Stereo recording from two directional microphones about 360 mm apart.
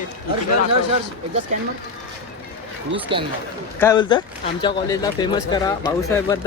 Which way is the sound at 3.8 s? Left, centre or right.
Centre.